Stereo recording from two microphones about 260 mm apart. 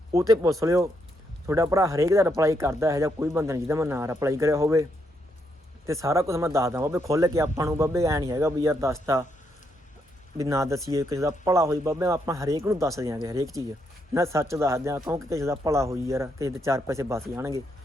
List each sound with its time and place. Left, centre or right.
0.1 s speech: centre
10.3 s speech: centre